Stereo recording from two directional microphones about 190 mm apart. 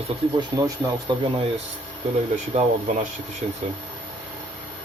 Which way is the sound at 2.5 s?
40° right (ahead or behind).